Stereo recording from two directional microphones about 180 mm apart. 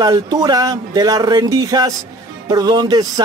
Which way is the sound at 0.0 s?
20° right (ahead or behind).